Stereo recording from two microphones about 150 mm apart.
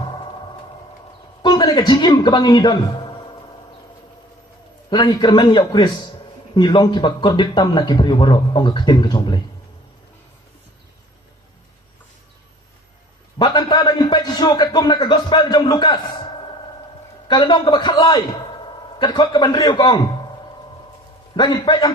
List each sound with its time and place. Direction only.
1.4 s a man's voice: 30° left (ahead or behind)
4.9 s a man's voice: 30° left (ahead or behind)
13.4 s a sound: 30° left (ahead or behind)
17.2 s a man's voice: 30° left (ahead or behind)
21.3 s a man's voice: 30° left (ahead or behind)